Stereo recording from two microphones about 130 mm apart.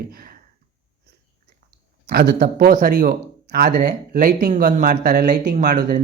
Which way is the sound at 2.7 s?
90° right.